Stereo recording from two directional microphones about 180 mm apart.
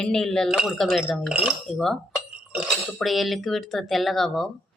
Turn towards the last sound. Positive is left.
turn(degrees=0)  # may be behind; listen again after turning